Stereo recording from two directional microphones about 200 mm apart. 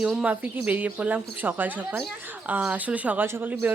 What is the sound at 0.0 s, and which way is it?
Speech, 5° right (ahead or behind).